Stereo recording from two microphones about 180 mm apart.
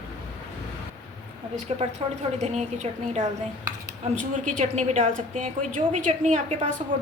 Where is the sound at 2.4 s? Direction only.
40° right (ahead or behind).